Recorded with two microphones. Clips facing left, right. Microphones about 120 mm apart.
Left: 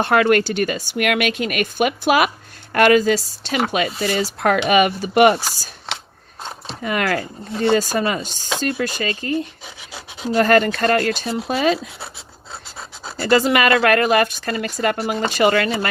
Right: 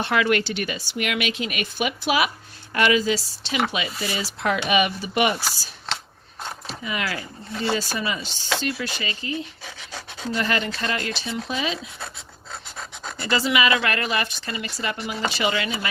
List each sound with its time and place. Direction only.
0.0 s speech: 45° left (ahead or behind)
6.8 s speech: 50° left (ahead or behind)
9.9 s rub: 10° left (ahead or behind)
10.3 s speech: 50° left (ahead or behind)
13.2 s speech: 50° left (ahead or behind)